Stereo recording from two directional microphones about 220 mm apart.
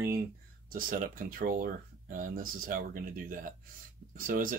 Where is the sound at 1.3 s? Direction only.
40° right (ahead or behind).